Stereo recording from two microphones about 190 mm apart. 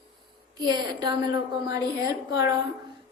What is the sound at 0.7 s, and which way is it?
A woman's voice, 20° right (ahead or behind).